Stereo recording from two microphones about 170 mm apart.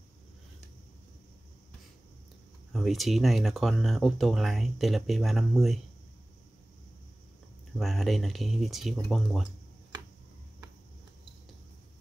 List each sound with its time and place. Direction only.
2.7 s speech: centre (ahead or behind)
7.7 s speech: centre (ahead or behind)